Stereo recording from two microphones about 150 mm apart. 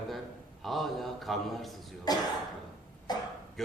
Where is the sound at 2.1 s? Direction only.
25° left (ahead or behind).